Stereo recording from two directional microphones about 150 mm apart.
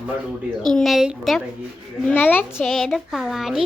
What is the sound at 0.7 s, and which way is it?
Speech, centre (ahead or behind).